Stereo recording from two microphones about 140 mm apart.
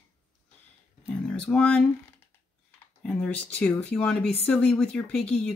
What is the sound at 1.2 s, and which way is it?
Speech, 5° left (ahead or behind).